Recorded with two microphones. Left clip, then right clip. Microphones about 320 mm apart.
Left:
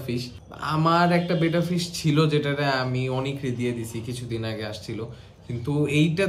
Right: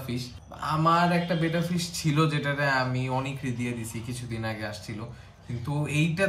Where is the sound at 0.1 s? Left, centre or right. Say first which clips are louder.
Left 7 dB; centre.